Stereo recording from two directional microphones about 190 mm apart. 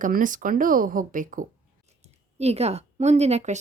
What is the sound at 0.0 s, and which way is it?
Speech, 45° right (ahead or behind).